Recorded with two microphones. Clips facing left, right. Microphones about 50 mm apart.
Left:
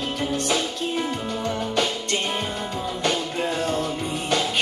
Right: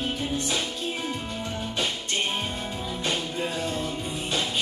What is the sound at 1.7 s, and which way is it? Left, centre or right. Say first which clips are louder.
Music: left 3 dB; left.